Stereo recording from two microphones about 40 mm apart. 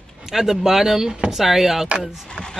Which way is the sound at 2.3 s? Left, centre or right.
Centre.